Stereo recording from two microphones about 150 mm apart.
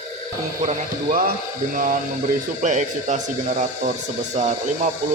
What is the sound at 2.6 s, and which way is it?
Speech, 55° right (ahead or behind).